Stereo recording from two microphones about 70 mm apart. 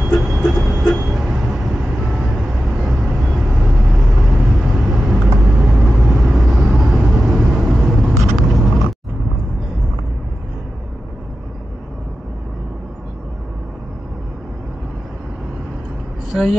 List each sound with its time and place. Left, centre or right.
0.1 s train: centre
8.2 s vehicle: centre
16.3 s a sound: centre